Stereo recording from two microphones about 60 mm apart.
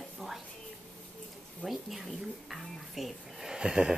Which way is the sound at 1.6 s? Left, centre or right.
Centre.